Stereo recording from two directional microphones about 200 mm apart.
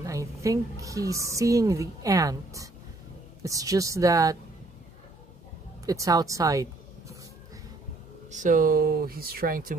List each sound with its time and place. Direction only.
0.0 s a woman's voice: 15° right (ahead or behind)
5.9 s speech: 15° right (ahead or behind)
8.3 s speech: 40° right (ahead or behind)